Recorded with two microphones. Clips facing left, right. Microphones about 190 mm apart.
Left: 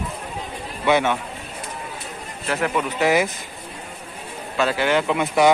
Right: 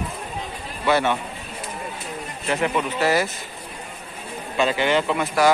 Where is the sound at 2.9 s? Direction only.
15° left (ahead or behind).